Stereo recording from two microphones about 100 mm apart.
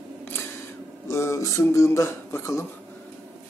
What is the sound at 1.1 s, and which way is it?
Speech, 25° left (ahead or behind).